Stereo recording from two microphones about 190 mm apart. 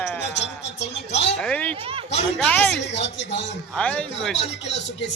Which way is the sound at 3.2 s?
70° left (ahead or behind).